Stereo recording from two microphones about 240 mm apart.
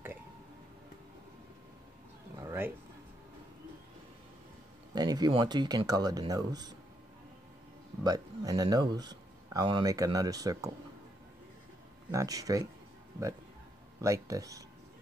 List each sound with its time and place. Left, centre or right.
2.3 s a sound: centre
4.9 s speech: centre
8.0 s speech: centre
12.1 s speech: centre
14.0 s speech: centre